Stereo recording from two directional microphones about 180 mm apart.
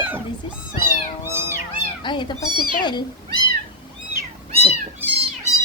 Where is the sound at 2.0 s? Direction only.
25° left (ahead or behind).